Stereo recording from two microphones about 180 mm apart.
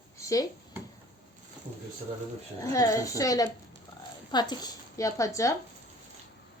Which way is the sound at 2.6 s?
15° left (ahead or behind).